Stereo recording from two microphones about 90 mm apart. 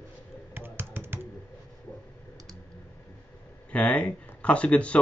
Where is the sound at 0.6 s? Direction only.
25° right (ahead or behind).